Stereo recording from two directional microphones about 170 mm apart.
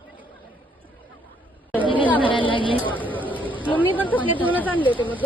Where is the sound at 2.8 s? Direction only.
10° left (ahead or behind).